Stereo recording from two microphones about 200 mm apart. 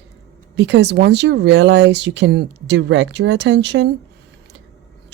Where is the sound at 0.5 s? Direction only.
60° right (ahead or behind).